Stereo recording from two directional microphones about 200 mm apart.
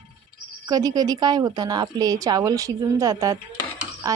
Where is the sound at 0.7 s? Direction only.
20° right (ahead or behind).